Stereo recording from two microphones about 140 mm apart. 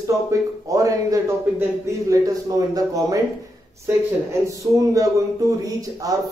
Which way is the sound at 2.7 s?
25° right (ahead or behind).